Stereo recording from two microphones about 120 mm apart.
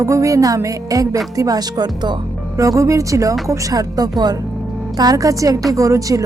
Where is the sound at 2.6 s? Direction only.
25° right (ahead or behind).